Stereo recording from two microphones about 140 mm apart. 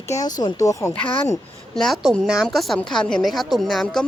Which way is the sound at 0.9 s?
10° left (ahead or behind).